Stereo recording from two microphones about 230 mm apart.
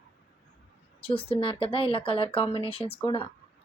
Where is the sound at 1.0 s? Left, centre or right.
Left.